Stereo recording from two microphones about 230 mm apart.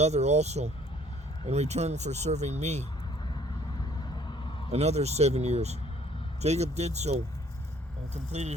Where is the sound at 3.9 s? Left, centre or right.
Centre.